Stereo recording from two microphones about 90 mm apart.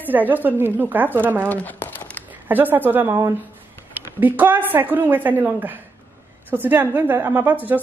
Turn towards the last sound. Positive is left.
turn(degrees=-20)  # may be behind; listen again after turning